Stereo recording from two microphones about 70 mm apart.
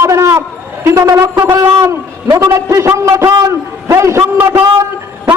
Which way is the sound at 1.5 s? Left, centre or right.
Right.